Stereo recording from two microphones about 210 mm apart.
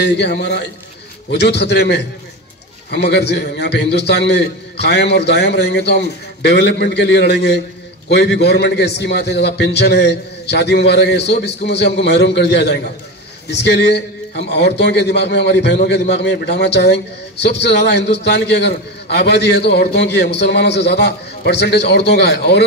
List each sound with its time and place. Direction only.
0.0 s a man's voice: 55° left (ahead or behind)